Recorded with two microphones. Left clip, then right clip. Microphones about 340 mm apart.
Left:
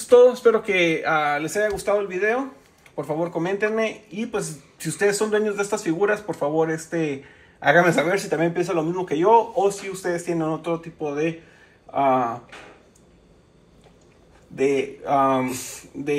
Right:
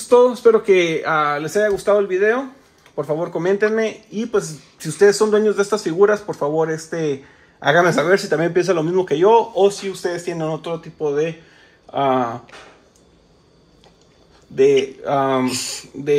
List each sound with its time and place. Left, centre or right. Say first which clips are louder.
0.1 s speech: right 2 dB; right
14.6 s speech: right 7 dB; right
15.5 s speech: right 8 dB; centre